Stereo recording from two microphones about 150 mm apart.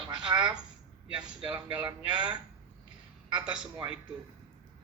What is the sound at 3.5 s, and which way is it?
Speech, 5° right (ahead or behind).